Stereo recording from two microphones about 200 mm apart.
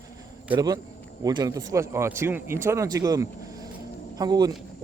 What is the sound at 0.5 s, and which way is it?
Speech, 20° right (ahead or behind).